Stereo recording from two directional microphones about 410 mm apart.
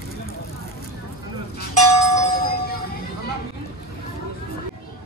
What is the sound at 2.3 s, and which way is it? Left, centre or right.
Music, left.